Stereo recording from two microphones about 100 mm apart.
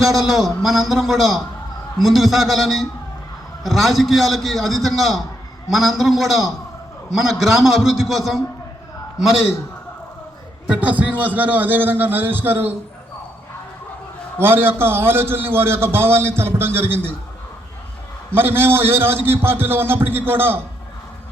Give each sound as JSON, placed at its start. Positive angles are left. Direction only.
{"t": 0.0, "sound": "a man's voice", "side_deg": 0}
{"t": 10.7, "sound": "a man's voice", "side_deg": -15}
{"t": 14.3, "sound": "a man's voice", "side_deg": -20}
{"t": 18.3, "sound": "a man's voice", "side_deg": -20}